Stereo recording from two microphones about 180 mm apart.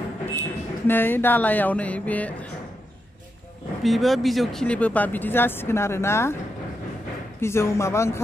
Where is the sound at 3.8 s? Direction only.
Centre (ahead or behind).